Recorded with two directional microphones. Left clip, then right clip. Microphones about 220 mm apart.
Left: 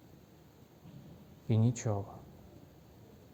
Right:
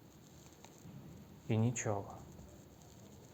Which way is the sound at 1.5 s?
60° left (ahead or behind).